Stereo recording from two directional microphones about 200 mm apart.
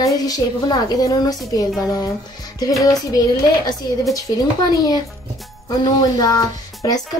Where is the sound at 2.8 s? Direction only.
15° left (ahead or behind).